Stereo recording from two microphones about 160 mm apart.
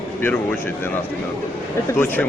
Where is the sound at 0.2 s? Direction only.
15° left (ahead or behind).